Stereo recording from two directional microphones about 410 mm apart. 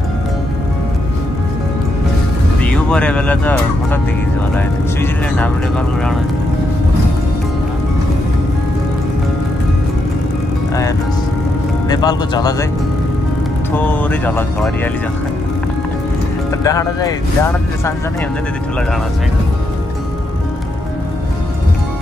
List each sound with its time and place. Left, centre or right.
2.6 s speech: centre
11.9 s speech: centre
13.7 s speech: centre
16.6 s speech: centre